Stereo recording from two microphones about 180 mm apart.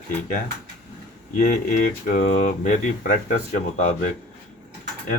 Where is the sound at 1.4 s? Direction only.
50° left (ahead or behind).